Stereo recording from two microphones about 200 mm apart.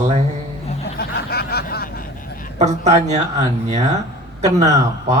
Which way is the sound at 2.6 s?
35° right (ahead or behind).